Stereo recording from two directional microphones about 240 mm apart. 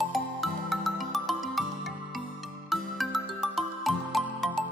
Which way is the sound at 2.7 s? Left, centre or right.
Centre.